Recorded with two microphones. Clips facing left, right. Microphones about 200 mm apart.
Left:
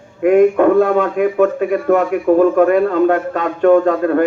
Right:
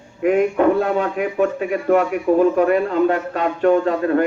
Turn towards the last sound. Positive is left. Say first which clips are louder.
# left 5 dB
turn(degrees=50)  # may be behind; listen again after turning